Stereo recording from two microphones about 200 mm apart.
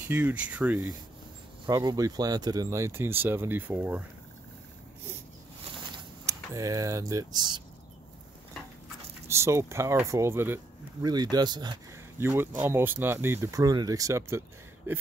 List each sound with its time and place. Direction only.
0.0 s speech: 10° right (ahead or behind)
1.7 s speech: 15° right (ahead or behind)
5.9 s speech: 15° right (ahead or behind)
9.3 s speech: 15° right (ahead or behind)